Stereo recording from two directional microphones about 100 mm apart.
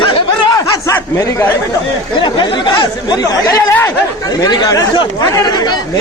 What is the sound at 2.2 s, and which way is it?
Speech, 55° left (ahead or behind).